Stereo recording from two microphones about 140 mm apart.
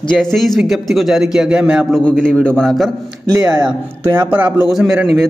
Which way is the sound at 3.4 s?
30° right (ahead or behind).